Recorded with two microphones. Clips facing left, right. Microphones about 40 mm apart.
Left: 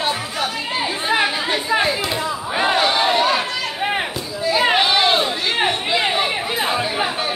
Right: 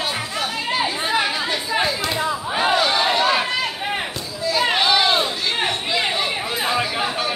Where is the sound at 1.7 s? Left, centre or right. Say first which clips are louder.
Left 2 dB; left.